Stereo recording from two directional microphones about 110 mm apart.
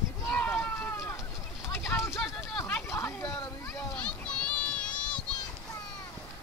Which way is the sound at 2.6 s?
15° left (ahead or behind).